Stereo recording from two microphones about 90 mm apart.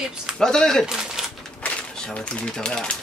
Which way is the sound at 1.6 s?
10° left (ahead or behind).